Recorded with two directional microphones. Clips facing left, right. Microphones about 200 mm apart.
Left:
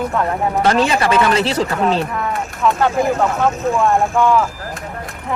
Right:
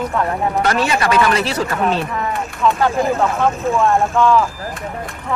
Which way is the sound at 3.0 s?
Centre (ahead or behind).